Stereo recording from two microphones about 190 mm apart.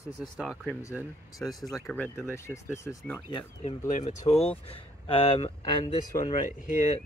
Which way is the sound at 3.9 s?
40° left (ahead or behind).